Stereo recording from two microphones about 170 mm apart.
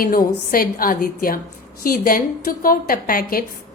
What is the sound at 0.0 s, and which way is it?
A woman's voice, 60° left (ahead or behind).